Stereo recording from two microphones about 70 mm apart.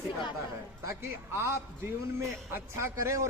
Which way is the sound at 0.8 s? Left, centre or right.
Right.